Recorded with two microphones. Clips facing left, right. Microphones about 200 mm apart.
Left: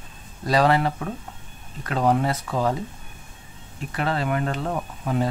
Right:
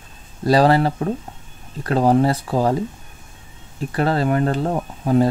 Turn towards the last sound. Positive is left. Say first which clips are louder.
# right 8 dB
turn(degrees=-35)  # may be behind; listen again after turning